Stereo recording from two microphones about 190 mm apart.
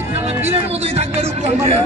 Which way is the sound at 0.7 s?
35° right (ahead or behind).